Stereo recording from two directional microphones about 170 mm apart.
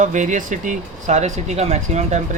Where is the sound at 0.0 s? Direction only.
45° right (ahead or behind).